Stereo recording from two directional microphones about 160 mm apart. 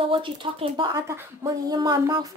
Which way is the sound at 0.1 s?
30° right (ahead or behind).